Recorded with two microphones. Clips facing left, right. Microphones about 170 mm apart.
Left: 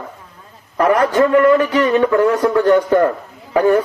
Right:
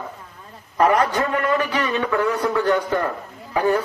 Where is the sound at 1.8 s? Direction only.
50° left (ahead or behind).